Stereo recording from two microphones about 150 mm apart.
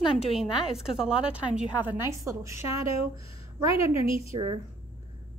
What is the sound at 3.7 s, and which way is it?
Speech, 40° left (ahead or behind).